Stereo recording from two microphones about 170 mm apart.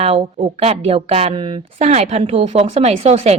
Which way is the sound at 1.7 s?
40° right (ahead or behind).